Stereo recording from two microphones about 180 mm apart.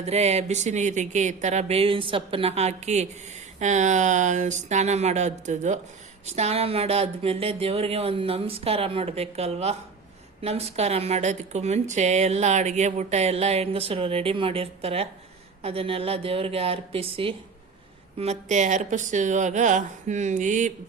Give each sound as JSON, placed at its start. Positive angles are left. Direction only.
{"t": 0.0, "sound": "a woman's voice", "side_deg": -35}